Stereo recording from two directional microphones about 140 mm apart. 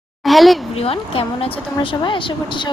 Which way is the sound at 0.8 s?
40° left (ahead or behind).